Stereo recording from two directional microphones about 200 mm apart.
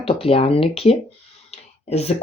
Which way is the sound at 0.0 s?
30° left (ahead or behind).